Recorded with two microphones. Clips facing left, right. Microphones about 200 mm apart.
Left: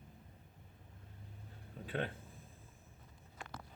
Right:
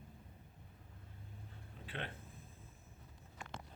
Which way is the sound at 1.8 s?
45° left (ahead or behind).